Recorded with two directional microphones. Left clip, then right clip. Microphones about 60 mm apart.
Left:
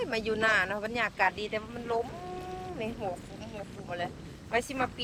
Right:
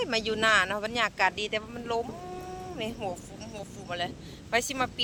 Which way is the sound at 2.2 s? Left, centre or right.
Centre.